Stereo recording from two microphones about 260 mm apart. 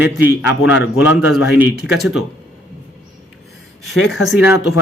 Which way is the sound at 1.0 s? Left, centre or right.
Centre.